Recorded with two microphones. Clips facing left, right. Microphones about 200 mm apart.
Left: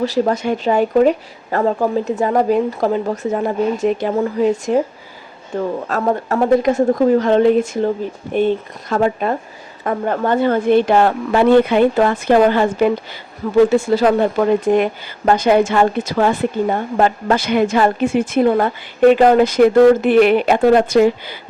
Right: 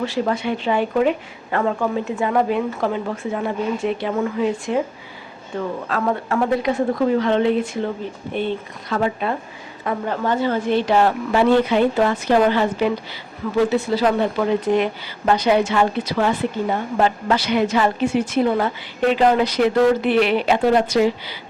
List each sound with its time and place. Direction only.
0.0 s a woman's voice: 40° left (ahead or behind)